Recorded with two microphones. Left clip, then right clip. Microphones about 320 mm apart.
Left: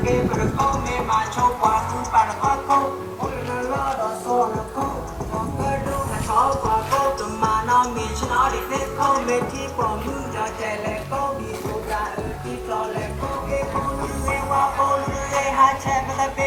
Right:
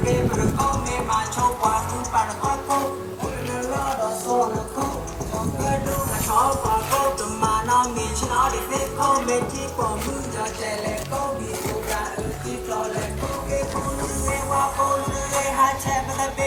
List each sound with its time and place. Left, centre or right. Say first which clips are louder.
0.0 s music: left 1 dB; centre
6.3 s music: left 1 dB; centre
14.3 s music: left 2 dB; centre